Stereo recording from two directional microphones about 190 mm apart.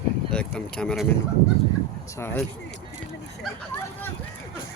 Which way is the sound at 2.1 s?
15° left (ahead or behind).